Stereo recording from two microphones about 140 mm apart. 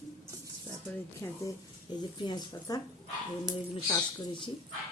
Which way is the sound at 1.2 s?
20° left (ahead or behind).